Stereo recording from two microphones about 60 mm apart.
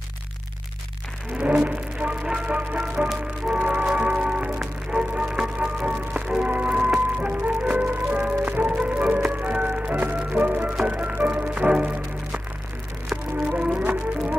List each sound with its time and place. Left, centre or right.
1.4 s music: right